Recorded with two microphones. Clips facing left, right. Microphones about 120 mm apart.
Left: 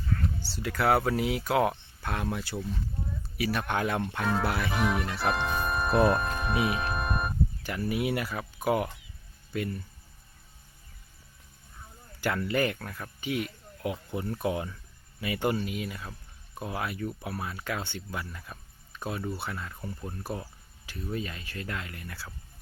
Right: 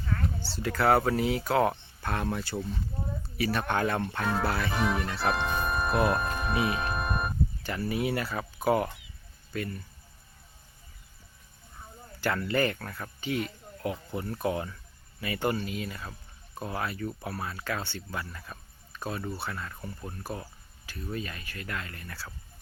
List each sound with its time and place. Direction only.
0.6 s speech: 5° left (ahead or behind)
4.4 s speech: 10° left (ahead or behind)
4.7 s speech: centre (ahead or behind)
6.6 s music: 5° left (ahead or behind)
7.6 s speech: 10° left (ahead or behind)
12.2 s speech: 15° left (ahead or behind)
20.2 s speech: 20° left (ahead or behind)